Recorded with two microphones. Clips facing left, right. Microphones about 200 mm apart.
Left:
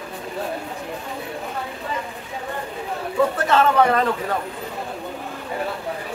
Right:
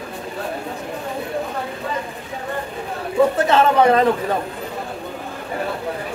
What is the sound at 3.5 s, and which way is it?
Speech, 20° right (ahead or behind).